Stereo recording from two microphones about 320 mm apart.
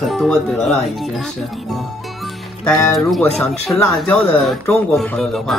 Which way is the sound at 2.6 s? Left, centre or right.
Centre.